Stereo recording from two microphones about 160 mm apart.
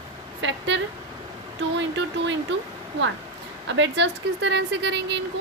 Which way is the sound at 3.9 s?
90° right.